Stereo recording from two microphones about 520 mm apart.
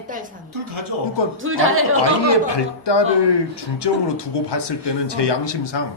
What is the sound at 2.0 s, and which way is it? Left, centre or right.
Speech, left.